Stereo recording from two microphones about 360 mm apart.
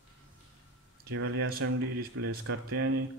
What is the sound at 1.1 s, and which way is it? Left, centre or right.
Speech, right.